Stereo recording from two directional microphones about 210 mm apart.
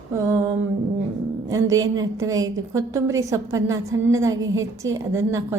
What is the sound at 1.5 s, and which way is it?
A woman's voice, 15° right (ahead or behind).